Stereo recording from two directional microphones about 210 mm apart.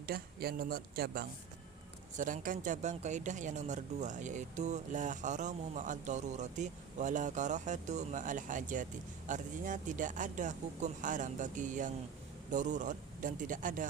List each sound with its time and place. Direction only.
0.0 s speech: 45° right (ahead or behind)